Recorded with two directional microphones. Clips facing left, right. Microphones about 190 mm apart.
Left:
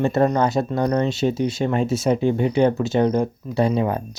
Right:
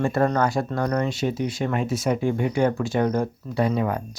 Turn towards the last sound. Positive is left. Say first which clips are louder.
# left 3 dB
turn(degrees=25)  # may be behind; listen again after turning